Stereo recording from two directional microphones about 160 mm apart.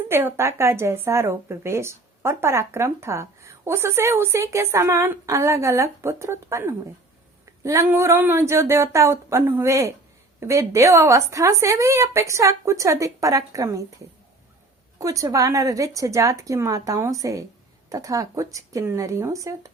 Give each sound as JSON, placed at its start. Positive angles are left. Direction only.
{"t": 0.1, "sound": "speech", "side_deg": -15}
{"t": 14.9, "sound": "speech", "side_deg": -20}